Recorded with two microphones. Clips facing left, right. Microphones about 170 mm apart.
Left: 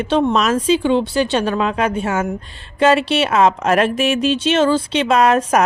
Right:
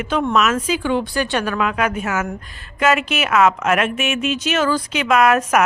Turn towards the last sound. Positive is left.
turn(degrees=30)  # may be behind; listen again after turning